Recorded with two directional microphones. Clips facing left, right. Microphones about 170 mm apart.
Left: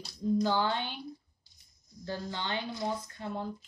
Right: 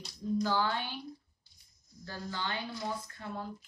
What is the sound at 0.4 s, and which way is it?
Speech, 25° left (ahead or behind).